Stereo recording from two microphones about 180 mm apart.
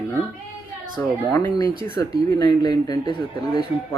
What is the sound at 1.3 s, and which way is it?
Speech, 20° left (ahead or behind).